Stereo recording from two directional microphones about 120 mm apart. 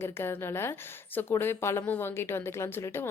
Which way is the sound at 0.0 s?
20° left (ahead or behind).